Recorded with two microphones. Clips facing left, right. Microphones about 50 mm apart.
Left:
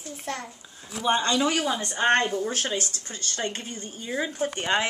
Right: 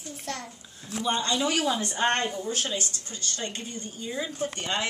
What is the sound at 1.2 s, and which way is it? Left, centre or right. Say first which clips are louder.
Speech: left 3 dB; left.